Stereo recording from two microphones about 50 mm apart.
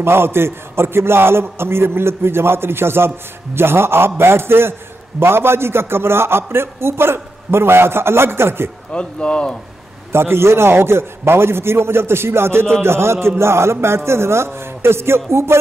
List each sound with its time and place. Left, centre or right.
0.0 s a man's voice: right
8.9 s speech: left
10.1 s a man's voice: right